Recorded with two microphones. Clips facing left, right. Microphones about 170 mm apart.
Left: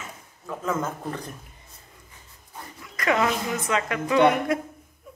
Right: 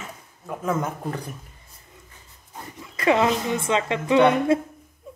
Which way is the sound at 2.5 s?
25° right (ahead or behind).